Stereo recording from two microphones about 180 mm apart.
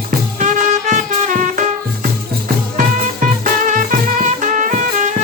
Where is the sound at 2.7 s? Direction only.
45° right (ahead or behind).